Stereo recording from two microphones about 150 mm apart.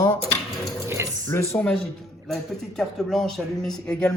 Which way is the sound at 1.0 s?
15° right (ahead or behind).